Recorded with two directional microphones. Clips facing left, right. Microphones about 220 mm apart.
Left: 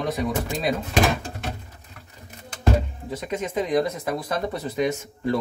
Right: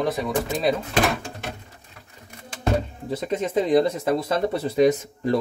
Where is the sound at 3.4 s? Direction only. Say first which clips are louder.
Right 4 dB; 30° right (ahead or behind).